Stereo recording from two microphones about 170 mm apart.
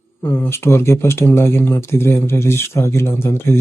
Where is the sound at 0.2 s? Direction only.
15° left (ahead or behind).